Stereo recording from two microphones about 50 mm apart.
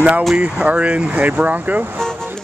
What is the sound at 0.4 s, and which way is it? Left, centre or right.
Speech, right.